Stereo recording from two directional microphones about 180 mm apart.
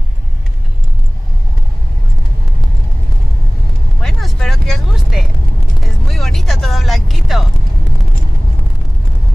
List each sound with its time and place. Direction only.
4.0 s vehicle: centre (ahead or behind)